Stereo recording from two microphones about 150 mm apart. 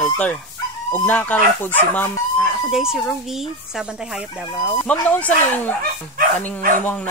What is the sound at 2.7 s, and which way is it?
Speech, 5° right (ahead or behind).